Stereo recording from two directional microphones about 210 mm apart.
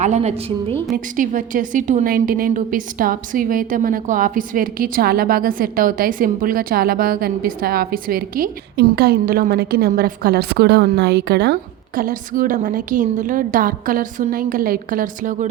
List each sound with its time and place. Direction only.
0.0 s a woman's voice: 30° right (ahead or behind); by 11.5 s 50° right (ahead or behind)
11.9 s a woman's voice: 40° right (ahead or behind)